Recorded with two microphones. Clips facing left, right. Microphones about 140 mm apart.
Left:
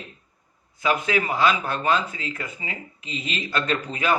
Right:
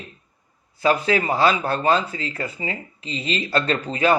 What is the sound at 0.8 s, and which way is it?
Speech, 35° right (ahead or behind).